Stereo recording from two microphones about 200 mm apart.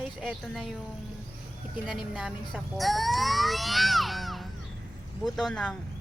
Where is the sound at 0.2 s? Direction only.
Centre (ahead or behind).